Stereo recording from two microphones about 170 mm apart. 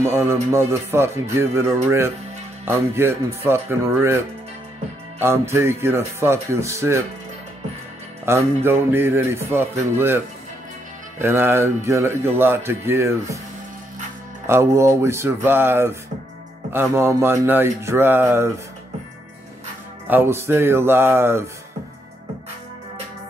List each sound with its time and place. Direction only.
0.0 s speech: 15° right (ahead or behind)
5.2 s speech: 15° right (ahead or behind)
8.3 s speech: 15° right (ahead or behind)
14.4 s speech: 15° right (ahead or behind)
20.1 s speech: 15° right (ahead or behind)